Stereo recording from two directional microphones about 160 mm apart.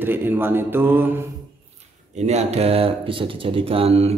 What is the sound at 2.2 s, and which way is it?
Speech, 45° right (ahead or behind).